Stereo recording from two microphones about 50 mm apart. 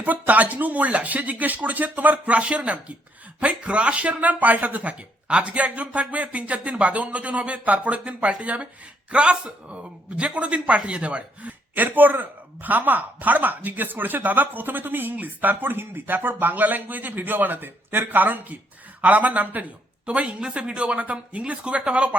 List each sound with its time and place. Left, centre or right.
0.0 s speech: right
11.7 s speech: right